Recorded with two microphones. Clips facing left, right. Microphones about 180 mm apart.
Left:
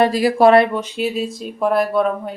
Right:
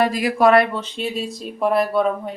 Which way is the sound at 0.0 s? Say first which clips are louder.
Left 4 dB; 30° left (ahead or behind).